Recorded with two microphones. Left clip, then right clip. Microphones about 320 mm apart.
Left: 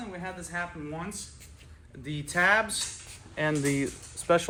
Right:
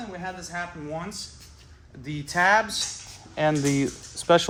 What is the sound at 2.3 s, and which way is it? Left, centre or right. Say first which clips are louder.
Speech: right 3 dB; right.